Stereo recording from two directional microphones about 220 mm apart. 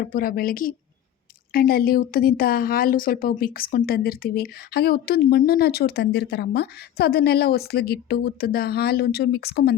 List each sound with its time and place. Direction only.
0.0 s speech: 40° left (ahead or behind)